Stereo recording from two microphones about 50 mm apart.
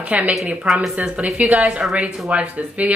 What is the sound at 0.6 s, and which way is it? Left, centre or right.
Speech, centre.